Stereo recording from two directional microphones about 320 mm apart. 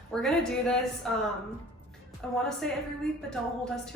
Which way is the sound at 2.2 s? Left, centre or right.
Centre.